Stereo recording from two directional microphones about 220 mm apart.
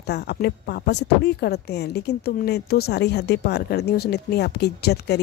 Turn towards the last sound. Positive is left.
turn(degrees=50)  # may be behind; listen again after turning